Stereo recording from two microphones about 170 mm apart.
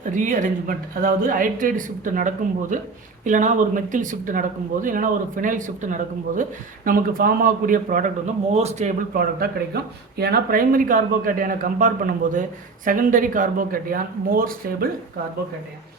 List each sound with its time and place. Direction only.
0.1 s speech: 50° right (ahead or behind)
8.5 s speech: 40° right (ahead or behind)
9.1 s speech: 65° right (ahead or behind)